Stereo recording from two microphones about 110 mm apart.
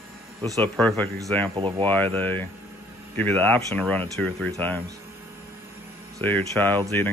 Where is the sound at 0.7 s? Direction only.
10° left (ahead or behind).